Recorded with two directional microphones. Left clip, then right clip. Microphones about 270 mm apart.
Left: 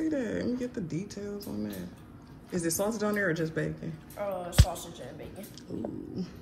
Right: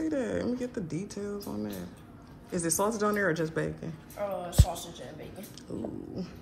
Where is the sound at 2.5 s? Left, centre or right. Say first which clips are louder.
Right 1 dB; centre.